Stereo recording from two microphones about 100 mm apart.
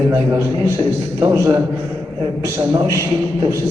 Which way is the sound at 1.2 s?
30° right (ahead or behind).